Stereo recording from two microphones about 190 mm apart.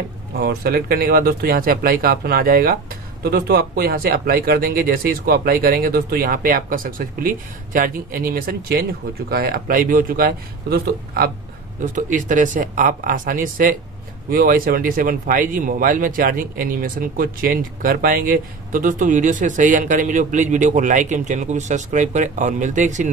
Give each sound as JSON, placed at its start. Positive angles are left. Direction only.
{"t": 0.4, "sound": "speech", "side_deg": -55}
{"t": 11.8, "sound": "speech", "side_deg": -45}